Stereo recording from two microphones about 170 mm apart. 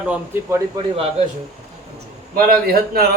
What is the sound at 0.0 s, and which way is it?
Speech, 10° right (ahead or behind).